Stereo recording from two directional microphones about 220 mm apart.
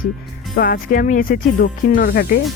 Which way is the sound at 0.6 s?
40° left (ahead or behind).